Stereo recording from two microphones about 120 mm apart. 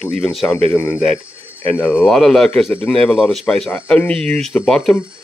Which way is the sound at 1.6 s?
15° left (ahead or behind).